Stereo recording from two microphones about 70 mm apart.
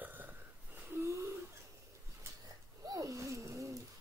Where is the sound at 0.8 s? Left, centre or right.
Right.